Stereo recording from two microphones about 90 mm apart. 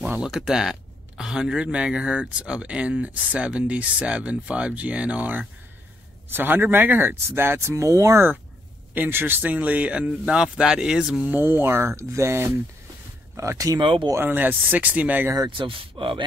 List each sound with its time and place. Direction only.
0.2 s speech: 5° right (ahead or behind); by 8.3 s 35° right (ahead or behind)
8.9 s speech: 20° right (ahead or behind)
11.2 s speech: 25° right (ahead or behind)
13.7 s speech: 70° right (ahead or behind)
14.1 s speech: 20° right (ahead or behind)
15.2 s speech: 40° right (ahead or behind)
15.5 s speech: 70° right (ahead or behind)